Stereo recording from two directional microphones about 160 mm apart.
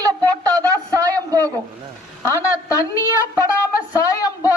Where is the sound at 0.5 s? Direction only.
20° right (ahead or behind).